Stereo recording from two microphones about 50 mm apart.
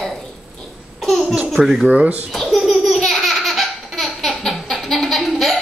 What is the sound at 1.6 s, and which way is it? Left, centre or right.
Speech, centre.